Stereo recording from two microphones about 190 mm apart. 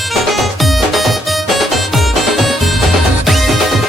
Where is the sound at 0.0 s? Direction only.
Centre (ahead or behind).